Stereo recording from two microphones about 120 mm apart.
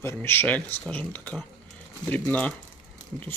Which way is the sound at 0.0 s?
20° left (ahead or behind).